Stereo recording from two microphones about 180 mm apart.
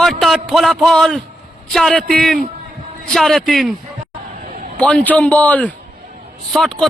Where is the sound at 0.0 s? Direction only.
Centre (ahead or behind).